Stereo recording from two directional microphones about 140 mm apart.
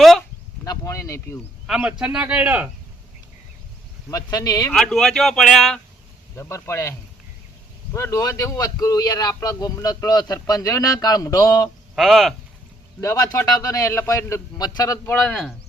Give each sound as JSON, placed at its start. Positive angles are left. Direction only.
{"t": 0.6, "sound": "a sound", "side_deg": 25}
{"t": 1.6, "sound": "a man's voice", "side_deg": -5}
{"t": 4.1, "sound": "speech", "side_deg": 25}
{"t": 4.7, "sound": "speech", "side_deg": 5}
{"t": 6.3, "sound": "speech", "side_deg": 20}
{"t": 7.9, "sound": "speech", "side_deg": 20}
{"t": 11.9, "sound": "speech", "side_deg": 0}
{"t": 13.0, "sound": "speech", "side_deg": 20}
{"t": 15.2, "sound": "speech", "side_deg": 5}